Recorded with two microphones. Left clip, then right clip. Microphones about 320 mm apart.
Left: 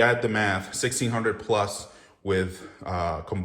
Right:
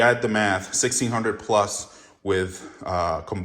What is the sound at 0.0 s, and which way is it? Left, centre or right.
Speech, centre.